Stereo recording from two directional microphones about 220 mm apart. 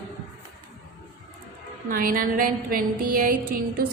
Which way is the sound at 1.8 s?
40° right (ahead or behind).